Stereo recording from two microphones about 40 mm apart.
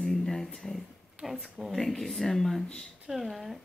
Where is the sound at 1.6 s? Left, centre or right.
Centre.